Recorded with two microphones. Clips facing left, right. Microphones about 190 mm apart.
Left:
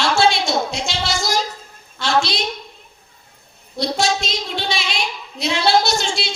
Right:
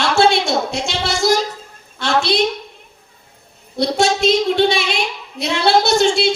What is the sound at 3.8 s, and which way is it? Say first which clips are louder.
A woman's voice: right 5 dB; 55° right (ahead or behind).